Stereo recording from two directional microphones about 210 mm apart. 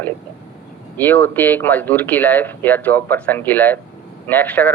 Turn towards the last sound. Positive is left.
turn(degrees=10)  # may be behind; listen again after turning